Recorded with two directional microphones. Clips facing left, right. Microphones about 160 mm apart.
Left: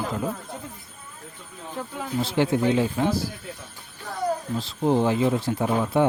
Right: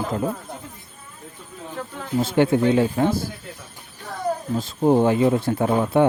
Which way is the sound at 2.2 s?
55° right (ahead or behind).